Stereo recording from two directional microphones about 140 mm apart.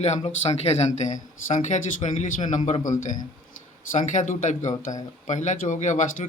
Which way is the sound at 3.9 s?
60° left (ahead or behind).